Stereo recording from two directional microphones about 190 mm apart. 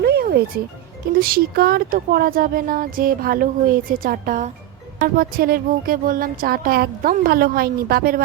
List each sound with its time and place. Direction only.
0.0 s music: 55° right (ahead or behind)
1.1 s speech: 50° right (ahead or behind)